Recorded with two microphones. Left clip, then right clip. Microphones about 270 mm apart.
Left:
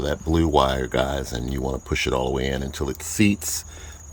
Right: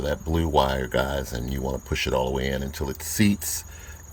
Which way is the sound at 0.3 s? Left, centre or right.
Centre.